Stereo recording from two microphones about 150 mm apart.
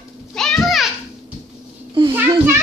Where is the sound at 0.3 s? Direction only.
5° left (ahead or behind).